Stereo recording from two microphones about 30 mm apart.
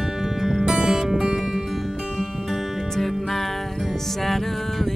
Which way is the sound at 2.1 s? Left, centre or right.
Centre.